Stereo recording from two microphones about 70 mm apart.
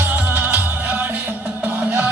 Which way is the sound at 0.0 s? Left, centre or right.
Right.